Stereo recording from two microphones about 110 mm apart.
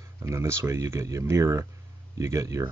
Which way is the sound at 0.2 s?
25° right (ahead or behind).